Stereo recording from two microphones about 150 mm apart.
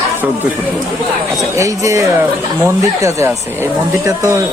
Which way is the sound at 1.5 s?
20° right (ahead or behind).